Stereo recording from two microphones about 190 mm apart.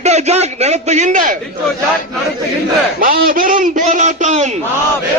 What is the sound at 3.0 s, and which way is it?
A man's voice, 50° right (ahead or behind).